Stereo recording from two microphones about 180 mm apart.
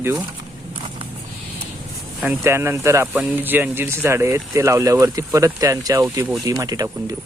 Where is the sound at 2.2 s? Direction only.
10° right (ahead or behind).